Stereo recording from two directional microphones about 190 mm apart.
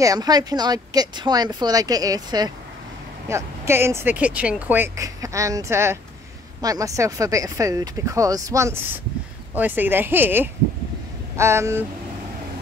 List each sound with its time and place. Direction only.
0.0 s speech: 20° right (ahead or behind)